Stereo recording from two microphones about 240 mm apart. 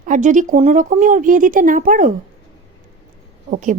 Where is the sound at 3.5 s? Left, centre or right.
Right.